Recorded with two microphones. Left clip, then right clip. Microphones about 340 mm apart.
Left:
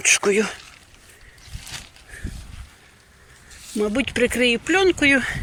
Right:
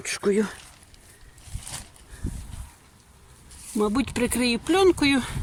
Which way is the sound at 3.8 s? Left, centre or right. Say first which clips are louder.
Left 4 dB; centre.